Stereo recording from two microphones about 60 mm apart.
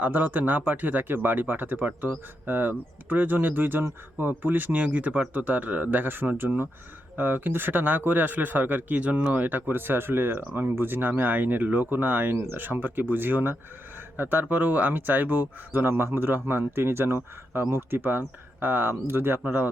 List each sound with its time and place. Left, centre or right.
0.0 s speech: right